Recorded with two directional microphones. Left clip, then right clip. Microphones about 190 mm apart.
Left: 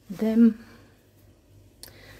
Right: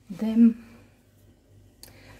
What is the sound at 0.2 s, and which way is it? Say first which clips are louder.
Speech: left 1 dB; 20° left (ahead or behind).